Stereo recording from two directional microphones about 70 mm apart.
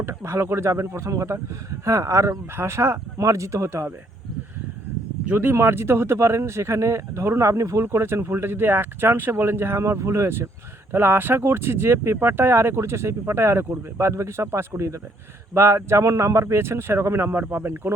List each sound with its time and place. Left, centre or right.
0.0 s speech: right
3.2 s speech: right
5.3 s speech: right
5.5 s speech: right